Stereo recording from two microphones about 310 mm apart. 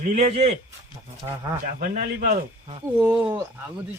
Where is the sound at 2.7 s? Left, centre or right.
Centre.